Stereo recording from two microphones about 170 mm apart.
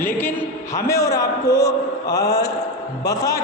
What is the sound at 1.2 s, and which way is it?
A man's voice, 20° left (ahead or behind).